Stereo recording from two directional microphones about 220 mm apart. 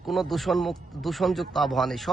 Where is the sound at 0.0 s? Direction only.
Centre (ahead or behind).